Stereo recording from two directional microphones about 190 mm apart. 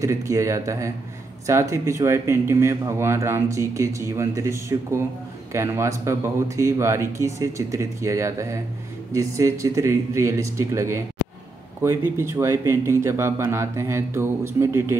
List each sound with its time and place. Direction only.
0.0 s speech: 15° right (ahead or behind)